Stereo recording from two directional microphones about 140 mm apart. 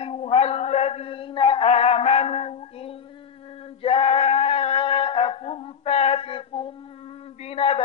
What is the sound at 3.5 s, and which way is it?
Male singing, 40° left (ahead or behind).